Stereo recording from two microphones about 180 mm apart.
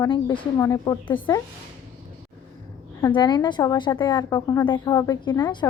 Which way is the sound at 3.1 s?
25° left (ahead or behind).